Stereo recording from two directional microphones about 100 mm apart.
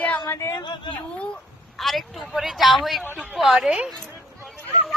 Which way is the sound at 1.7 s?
Centre (ahead or behind).